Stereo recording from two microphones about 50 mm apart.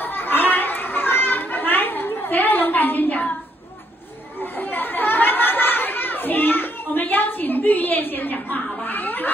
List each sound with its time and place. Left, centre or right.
0.0 s children playing: left
4.4 s chatter: left